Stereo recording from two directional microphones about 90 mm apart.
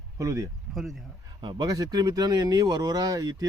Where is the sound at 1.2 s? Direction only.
55° right (ahead or behind).